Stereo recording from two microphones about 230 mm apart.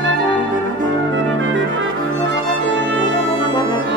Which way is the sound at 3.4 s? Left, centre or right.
Centre.